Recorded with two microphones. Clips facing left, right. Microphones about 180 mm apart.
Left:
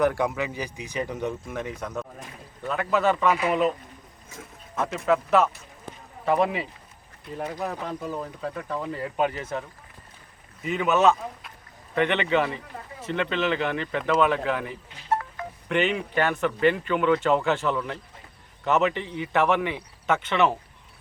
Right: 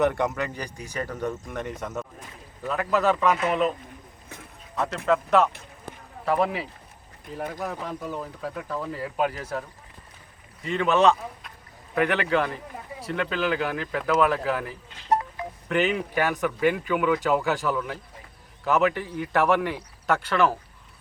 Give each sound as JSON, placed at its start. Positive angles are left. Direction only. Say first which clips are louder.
{"t": 0.0, "sound": "speech", "louder": "even", "side_deg": 0}
{"t": 15.1, "sound": "telephone dialing", "louder": "right 3 dB", "side_deg": -20}
{"t": 15.7, "sound": "speech", "louder": "even", "side_deg": 0}
{"t": 20.4, "sound": "speech", "louder": "even", "side_deg": 5}